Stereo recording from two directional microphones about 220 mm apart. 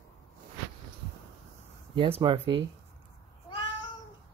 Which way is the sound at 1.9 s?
25° right (ahead or behind).